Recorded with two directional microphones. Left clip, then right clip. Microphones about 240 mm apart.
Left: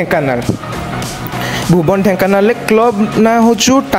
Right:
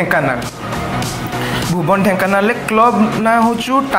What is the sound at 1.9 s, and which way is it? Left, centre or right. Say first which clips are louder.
Speech: right 1 dB; left.